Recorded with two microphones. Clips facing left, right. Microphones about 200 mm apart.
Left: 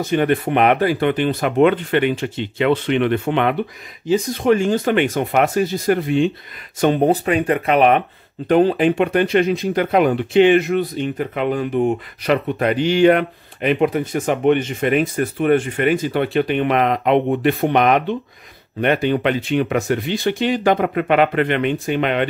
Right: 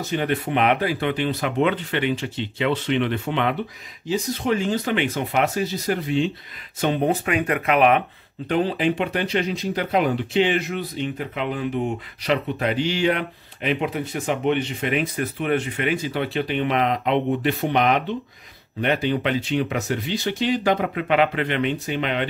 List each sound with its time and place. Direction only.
0.1 s speech: 55° left (ahead or behind)
7.2 s speech: 30° left (ahead or behind)
8.5 s speech: 50° left (ahead or behind)